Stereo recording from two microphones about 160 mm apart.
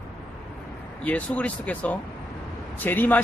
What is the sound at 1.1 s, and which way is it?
Speech, 10° left (ahead or behind).